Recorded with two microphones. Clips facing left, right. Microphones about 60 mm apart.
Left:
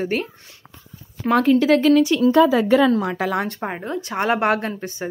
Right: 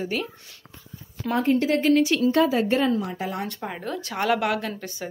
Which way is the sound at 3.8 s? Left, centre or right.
Left.